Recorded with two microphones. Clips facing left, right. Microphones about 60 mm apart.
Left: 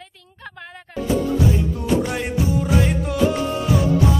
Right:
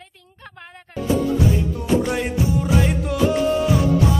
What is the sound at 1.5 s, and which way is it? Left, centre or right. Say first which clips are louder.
Music: even; centre.